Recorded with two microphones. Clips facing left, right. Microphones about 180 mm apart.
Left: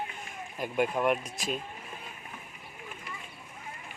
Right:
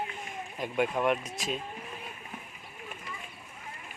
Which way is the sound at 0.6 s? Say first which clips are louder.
Left 1 dB; 5° left (ahead or behind).